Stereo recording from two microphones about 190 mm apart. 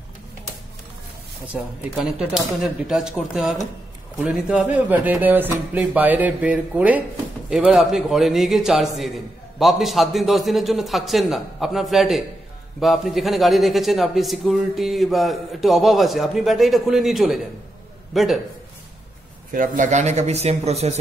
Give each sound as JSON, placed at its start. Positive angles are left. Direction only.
{"t": 1.5, "sound": "a man's voice", "side_deg": -5}
{"t": 19.5, "sound": "speech", "side_deg": -45}